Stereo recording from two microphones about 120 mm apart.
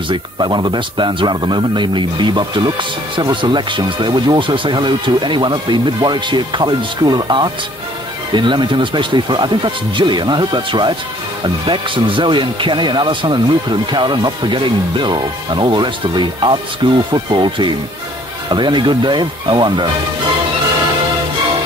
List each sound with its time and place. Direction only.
0.1 s speech: 40° right (ahead or behind)